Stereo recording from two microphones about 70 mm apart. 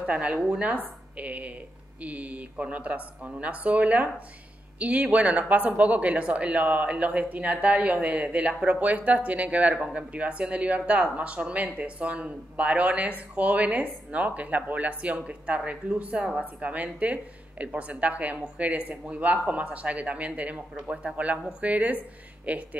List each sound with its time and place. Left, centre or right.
0.0 s a woman's voice: centre